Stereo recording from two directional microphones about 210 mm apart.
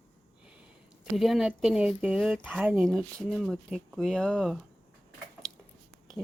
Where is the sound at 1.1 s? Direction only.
Centre (ahead or behind).